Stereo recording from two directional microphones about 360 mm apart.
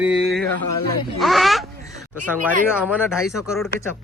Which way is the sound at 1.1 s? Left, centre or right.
Centre.